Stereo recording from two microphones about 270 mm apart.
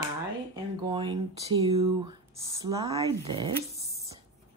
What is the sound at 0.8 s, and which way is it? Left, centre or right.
Speech, centre.